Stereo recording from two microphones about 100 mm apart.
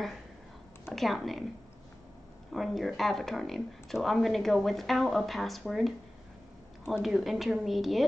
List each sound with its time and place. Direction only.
0.9 s speech: centre (ahead or behind)
2.5 s speech: centre (ahead or behind)